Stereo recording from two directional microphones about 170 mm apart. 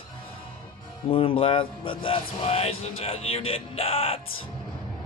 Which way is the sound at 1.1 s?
30° left (ahead or behind).